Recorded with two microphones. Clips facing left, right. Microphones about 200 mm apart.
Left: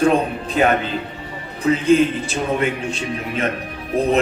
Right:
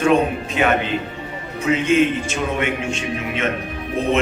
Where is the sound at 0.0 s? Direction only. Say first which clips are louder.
Even; 35° left (ahead or behind).